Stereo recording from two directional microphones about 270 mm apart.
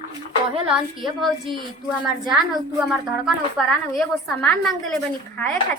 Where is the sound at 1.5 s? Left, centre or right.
Centre.